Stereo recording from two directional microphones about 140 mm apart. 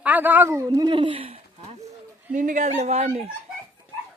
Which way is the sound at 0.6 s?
30° right (ahead or behind).